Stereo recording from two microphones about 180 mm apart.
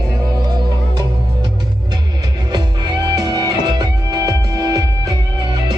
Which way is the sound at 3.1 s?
25° right (ahead or behind).